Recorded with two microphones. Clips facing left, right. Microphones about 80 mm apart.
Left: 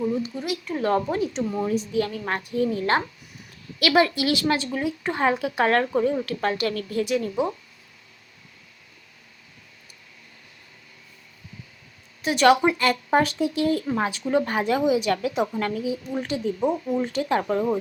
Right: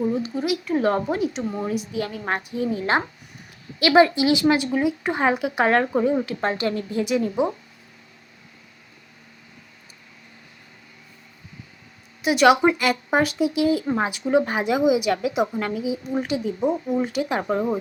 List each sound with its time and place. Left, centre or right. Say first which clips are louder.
0.3 s a woman's voice: right 5 dB; centre
1.4 s speech: left 1 dB; right
1.6 s a woman's voice: left 2 dB; centre
12.2 s a woman's voice: right 2 dB; centre
13.8 s a woman's voice: right 2 dB; right